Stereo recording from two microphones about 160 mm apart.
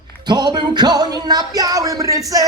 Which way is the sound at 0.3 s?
25° right (ahead or behind).